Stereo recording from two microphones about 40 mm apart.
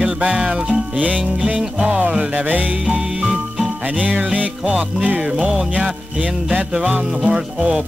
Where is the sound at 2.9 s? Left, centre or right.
Right.